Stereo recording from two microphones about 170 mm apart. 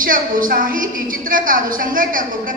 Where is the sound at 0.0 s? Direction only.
55° right (ahead or behind).